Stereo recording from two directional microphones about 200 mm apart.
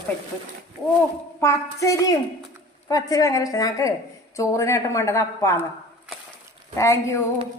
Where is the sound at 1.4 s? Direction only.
15° left (ahead or behind).